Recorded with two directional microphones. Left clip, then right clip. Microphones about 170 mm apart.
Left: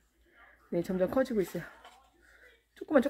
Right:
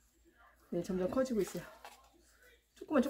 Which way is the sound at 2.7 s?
30° left (ahead or behind).